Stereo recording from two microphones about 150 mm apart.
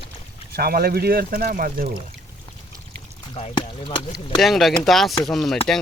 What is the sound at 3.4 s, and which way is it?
Speech, 35° left (ahead or behind).